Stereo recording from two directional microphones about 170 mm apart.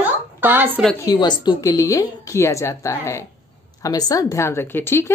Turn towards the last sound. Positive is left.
turn(degrees=15)  # may be behind; listen again after turning